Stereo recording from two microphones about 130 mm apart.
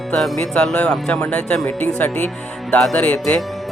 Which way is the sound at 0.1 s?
5° left (ahead or behind).